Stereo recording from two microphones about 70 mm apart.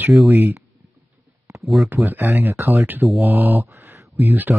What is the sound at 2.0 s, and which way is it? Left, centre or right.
Speech, right.